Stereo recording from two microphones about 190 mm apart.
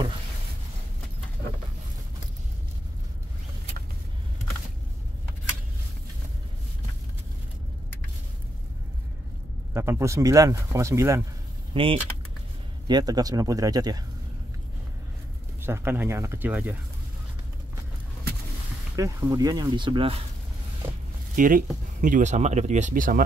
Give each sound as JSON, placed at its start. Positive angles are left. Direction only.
{"t": 9.8, "sound": "speech", "side_deg": -15}
{"t": 11.7, "sound": "speech", "side_deg": -30}
{"t": 15.6, "sound": "speech", "side_deg": -10}
{"t": 18.9, "sound": "speech", "side_deg": -15}
{"t": 21.4, "sound": "speech", "side_deg": -45}